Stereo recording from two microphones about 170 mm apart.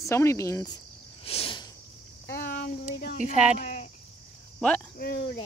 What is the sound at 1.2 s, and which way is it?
Cricket, 35° left (ahead or behind).